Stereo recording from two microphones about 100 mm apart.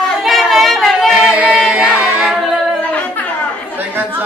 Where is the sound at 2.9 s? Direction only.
15° left (ahead or behind).